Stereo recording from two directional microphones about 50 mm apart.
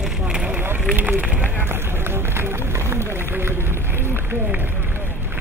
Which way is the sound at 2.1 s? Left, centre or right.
Right.